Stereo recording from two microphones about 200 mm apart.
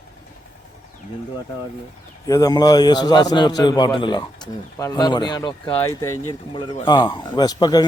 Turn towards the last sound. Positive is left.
turn(degrees=20)  # may be behind; listen again after turning